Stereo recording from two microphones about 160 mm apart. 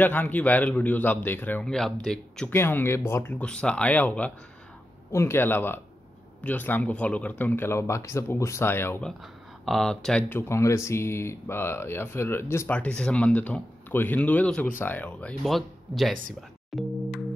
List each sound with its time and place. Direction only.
0.0 s speech: 10° left (ahead or behind)
9.2 s speech: centre (ahead or behind)
10.5 s speech: 15° left (ahead or behind); by 17.2 s centre (ahead or behind)